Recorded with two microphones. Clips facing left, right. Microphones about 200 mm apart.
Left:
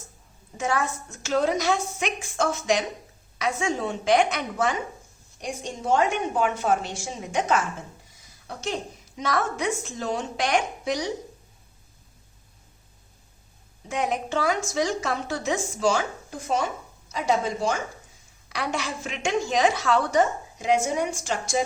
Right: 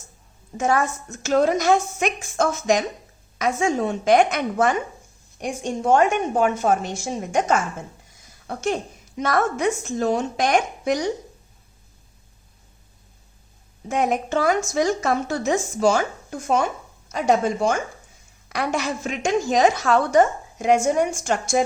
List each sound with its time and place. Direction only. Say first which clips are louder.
0.5 s a woman's voice: right 5 dB; 45° right (ahead or behind)
13.8 s a woman's voice: right 5 dB; 50° right (ahead or behind)
17.1 s a woman's voice: right 5 dB; 50° right (ahead or behind)